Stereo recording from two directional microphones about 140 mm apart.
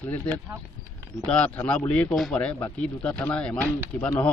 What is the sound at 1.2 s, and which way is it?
A man's voice, 5° left (ahead or behind).